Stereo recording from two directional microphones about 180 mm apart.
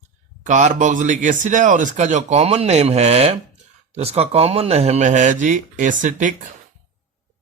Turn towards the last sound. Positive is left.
turn(degrees=-45)  # may be behind; listen again after turning